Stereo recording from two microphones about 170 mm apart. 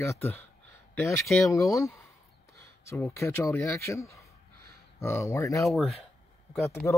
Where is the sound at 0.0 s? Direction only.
15° left (ahead or behind).